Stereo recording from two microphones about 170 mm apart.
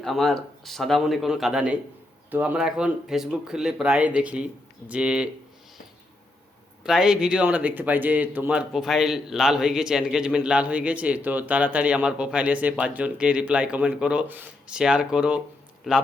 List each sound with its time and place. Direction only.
0.0 s speech: centre (ahead or behind)
6.8 s speech: 5° right (ahead or behind)